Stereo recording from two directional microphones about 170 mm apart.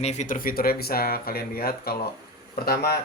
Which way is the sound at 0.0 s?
45° left (ahead or behind).